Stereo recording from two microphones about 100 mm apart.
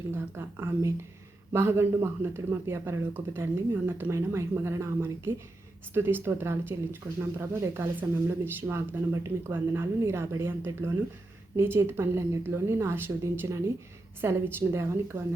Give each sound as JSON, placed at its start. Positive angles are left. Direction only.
{"t": 0.1, "sound": "speech", "side_deg": -25}